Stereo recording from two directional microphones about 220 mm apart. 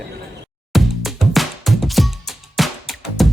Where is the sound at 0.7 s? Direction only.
Centre (ahead or behind).